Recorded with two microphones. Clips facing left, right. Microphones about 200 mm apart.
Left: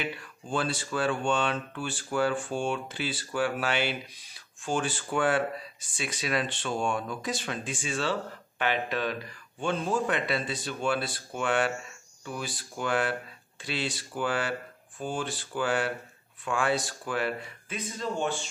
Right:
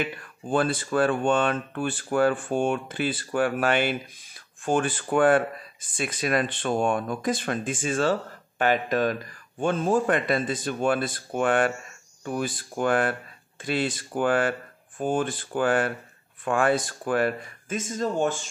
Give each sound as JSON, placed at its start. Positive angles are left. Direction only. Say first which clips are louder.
{"t": 0.0, "sound": "speech", "louder": "right 5 dB", "side_deg": -50}